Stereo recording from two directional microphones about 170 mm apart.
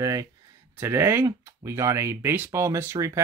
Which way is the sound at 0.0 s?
20° right (ahead or behind).